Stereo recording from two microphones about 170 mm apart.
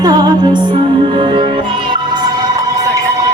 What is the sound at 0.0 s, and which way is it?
Music, 25° right (ahead or behind).